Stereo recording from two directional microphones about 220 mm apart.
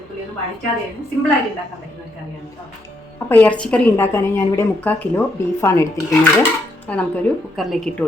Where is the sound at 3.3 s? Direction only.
5° left (ahead or behind).